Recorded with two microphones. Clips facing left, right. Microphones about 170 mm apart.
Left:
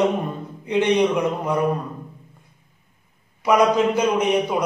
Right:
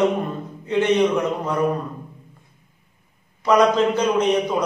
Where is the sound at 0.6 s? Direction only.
15° left (ahead or behind).